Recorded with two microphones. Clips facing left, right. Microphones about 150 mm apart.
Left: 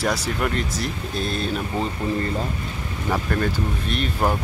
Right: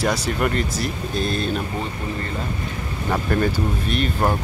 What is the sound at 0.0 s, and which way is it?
Speech, centre (ahead or behind).